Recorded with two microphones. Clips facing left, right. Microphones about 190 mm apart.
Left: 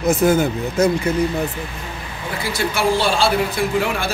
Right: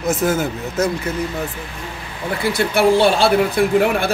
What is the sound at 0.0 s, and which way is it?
Speech, centre (ahead or behind).